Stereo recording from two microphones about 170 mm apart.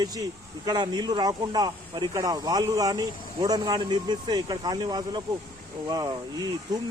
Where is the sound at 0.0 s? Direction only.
25° right (ahead or behind).